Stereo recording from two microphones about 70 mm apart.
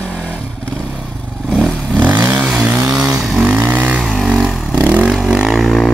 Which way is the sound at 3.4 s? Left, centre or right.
Right.